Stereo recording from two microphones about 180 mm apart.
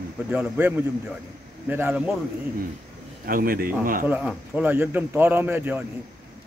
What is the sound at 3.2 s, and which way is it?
Speech, 55° right (ahead or behind).